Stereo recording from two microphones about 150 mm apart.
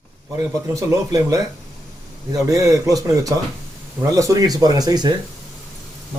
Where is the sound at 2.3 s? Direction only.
25° right (ahead or behind).